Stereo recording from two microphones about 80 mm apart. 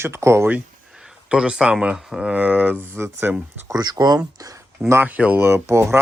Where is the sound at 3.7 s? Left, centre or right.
Right.